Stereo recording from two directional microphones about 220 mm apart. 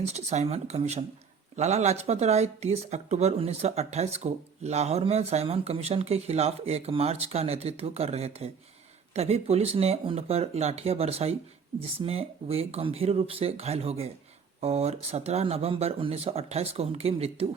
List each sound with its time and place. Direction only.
0.0 s speech: 30° right (ahead or behind)